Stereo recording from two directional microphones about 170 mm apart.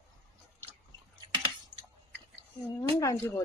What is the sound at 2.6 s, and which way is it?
Speech, 20° left (ahead or behind).